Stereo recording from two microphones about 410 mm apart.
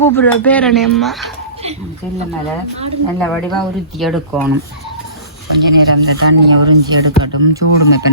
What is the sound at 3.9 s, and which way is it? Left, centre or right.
Speech, centre.